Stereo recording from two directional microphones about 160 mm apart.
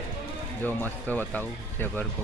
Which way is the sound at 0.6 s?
10° left (ahead or behind).